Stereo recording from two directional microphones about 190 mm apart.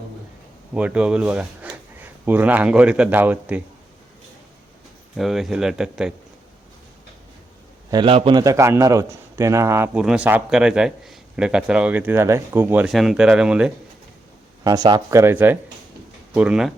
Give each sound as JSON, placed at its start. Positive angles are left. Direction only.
{"t": 0.7, "sound": "a man's voice", "side_deg": -5}
{"t": 5.1, "sound": "speech", "side_deg": 0}
{"t": 7.9, "sound": "a man's voice", "side_deg": -25}
{"t": 14.6, "sound": "a man's voice", "side_deg": -20}